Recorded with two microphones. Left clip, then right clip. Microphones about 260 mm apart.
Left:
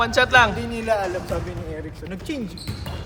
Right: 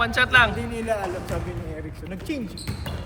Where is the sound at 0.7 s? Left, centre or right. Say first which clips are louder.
Left 4 dB; left.